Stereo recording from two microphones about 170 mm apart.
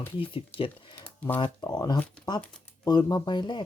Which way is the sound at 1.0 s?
10° left (ahead or behind).